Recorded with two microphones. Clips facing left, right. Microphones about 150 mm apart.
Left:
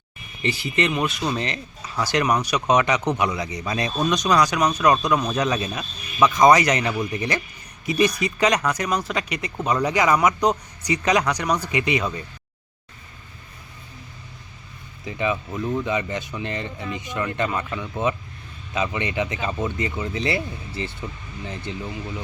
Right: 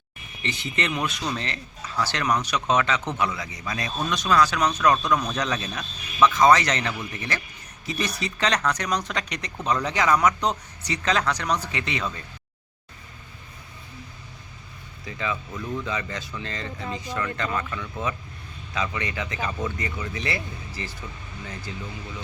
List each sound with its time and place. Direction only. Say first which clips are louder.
0.4 s speech: left 5 dB; 5° left (ahead or behind)
1.3 s speech: left 4 dB; 15° left (ahead or behind)
15.0 s speech: left 5 dB; 20° left (ahead or behind)